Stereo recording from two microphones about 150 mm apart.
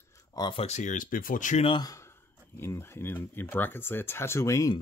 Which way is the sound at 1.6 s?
35° left (ahead or behind).